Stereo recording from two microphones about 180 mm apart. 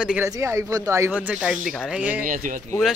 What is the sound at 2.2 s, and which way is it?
Speech, 45° right (ahead or behind).